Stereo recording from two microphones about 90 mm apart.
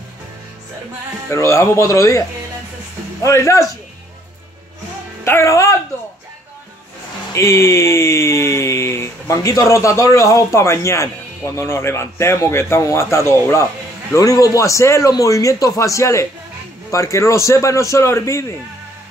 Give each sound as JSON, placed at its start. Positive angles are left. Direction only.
{"t": 1.3, "sound": "speech", "side_deg": 35}
{"t": 3.3, "sound": "speech", "side_deg": 35}
{"t": 5.2, "sound": "speech", "side_deg": 30}
{"t": 7.3, "sound": "speech", "side_deg": 30}